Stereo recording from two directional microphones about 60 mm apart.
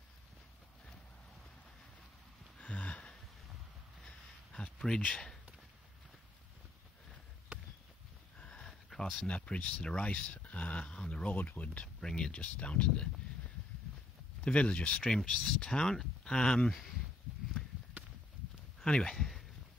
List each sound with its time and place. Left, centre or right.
2.6 s a sound: left
5.1 s speech: centre
8.4 s a sound: centre
9.3 s speech: centre
12.0 s speech: centre
14.4 s speech: centre
15.1 s speech: centre
18.0 s a sound: right
18.8 s speech: centre